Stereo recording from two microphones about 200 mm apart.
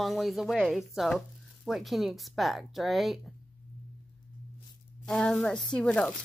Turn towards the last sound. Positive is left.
turn(degrees=5)  # may be behind; listen again after turning